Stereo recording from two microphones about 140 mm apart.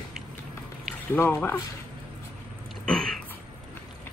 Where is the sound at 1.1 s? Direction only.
15° left (ahead or behind).